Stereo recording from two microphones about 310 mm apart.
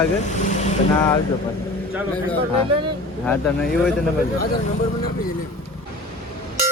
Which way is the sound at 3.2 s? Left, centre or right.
Centre.